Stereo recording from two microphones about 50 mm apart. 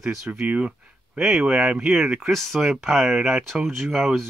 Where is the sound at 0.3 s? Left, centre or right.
Right.